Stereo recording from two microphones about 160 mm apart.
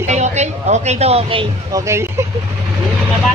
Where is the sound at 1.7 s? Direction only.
20° right (ahead or behind).